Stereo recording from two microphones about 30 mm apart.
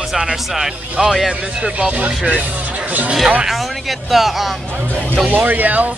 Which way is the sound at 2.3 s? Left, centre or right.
Right.